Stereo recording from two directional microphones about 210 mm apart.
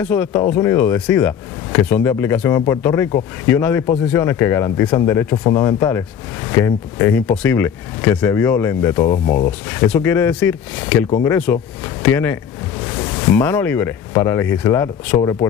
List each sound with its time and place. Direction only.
0.0 s speech: 10° left (ahead or behind)